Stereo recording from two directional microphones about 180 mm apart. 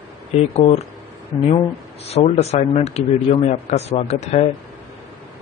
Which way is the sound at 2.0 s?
35° left (ahead or behind).